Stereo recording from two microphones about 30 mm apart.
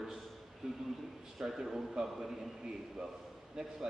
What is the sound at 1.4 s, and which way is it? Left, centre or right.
Speech, centre.